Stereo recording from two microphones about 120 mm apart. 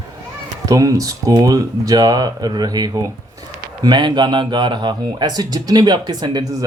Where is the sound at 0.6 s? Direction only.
30° right (ahead or behind).